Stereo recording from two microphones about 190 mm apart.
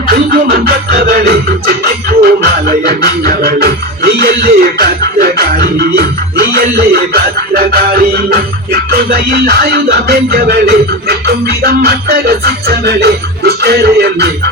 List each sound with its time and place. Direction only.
0.1 s music: 55° right (ahead or behind)